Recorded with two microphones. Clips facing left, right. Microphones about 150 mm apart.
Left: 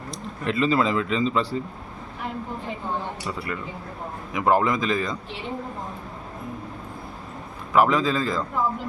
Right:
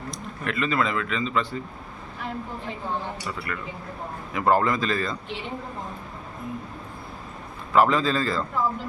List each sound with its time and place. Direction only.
0.1 s speech: 30° left (ahead or behind)
3.2 s a man's voice: 20° left (ahead or behind)
7.8 s a man's voice: 10° left (ahead or behind)